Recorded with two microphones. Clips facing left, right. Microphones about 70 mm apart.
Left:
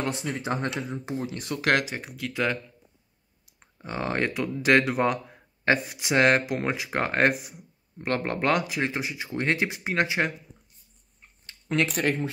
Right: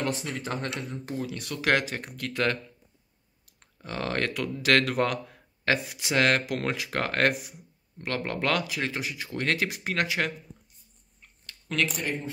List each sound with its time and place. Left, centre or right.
0.2 s speech: centre
0.7 s speech: centre
1.2 s speech: left
2.0 s speech: centre
3.7 s speech: centre
5.7 s speech: left
6.1 s speech: centre
6.4 s speech: centre
8.0 s speech: left
8.4 s speech: left
11.9 s speech: left